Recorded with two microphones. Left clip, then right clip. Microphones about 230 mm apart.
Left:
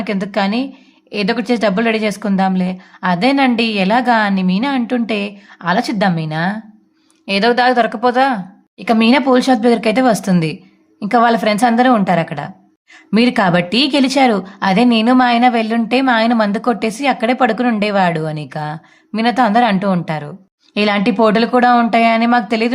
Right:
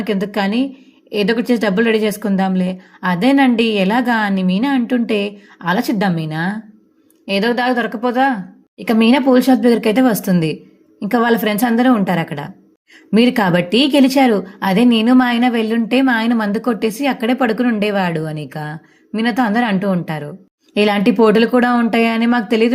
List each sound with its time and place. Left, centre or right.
0.0 s speech: centre
7.3 s a woman's voice: centre